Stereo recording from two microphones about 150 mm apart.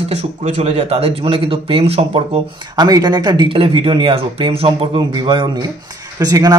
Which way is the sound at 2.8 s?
25° right (ahead or behind).